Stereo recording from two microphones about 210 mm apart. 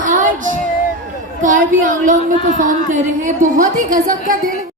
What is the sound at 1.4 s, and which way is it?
Speech, 40° right (ahead or behind).